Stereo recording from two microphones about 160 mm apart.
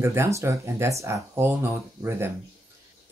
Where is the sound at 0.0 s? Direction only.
15° right (ahead or behind).